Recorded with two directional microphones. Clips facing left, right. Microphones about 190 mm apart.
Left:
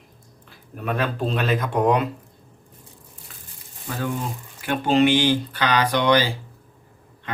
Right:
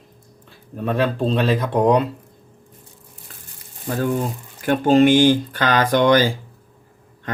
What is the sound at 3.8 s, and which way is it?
Speech, 45° right (ahead or behind).